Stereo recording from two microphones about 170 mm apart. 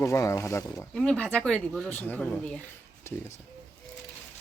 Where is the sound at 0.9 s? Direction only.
5° left (ahead or behind).